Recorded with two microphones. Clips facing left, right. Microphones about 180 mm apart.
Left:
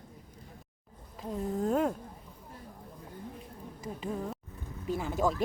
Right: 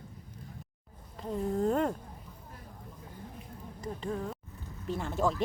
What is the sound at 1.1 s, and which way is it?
Speech, 5° left (ahead or behind).